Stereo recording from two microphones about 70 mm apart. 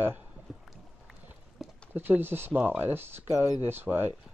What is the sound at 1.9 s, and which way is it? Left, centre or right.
Speech, right.